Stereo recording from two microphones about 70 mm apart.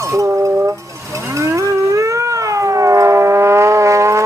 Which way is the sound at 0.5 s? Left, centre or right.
Right.